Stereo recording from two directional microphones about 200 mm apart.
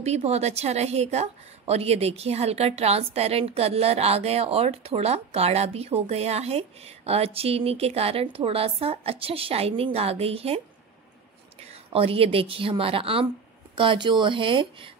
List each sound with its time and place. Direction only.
0.0 s a woman's voice: 30° right (ahead or behind)
11.7 s a woman's voice: 30° right (ahead or behind)